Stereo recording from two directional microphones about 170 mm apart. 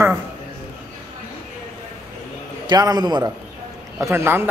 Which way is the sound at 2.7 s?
25° right (ahead or behind).